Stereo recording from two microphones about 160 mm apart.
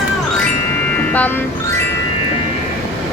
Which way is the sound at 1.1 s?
10° left (ahead or behind).